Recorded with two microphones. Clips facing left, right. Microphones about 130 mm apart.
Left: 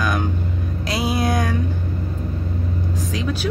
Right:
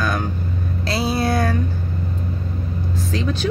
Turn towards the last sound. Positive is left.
turn(degrees=10)  # may be behind; listen again after turning